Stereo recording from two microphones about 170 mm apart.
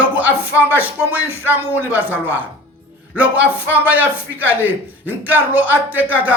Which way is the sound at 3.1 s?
10° right (ahead or behind).